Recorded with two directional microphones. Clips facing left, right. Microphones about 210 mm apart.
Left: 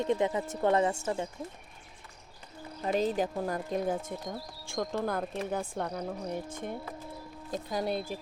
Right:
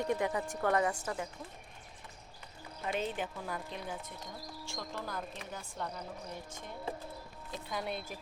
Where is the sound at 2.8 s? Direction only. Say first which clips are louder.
Left 7 dB; 35° left (ahead or behind); by 6.8 s 55° left (ahead or behind).